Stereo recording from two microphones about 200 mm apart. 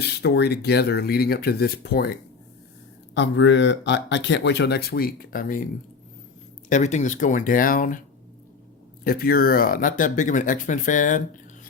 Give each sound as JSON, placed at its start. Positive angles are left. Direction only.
{"t": 0.0, "sound": "speech", "side_deg": 55}
{"t": 3.2, "sound": "speech", "side_deg": 65}
{"t": 6.7, "sound": "speech", "side_deg": 35}
{"t": 9.0, "sound": "speech", "side_deg": 50}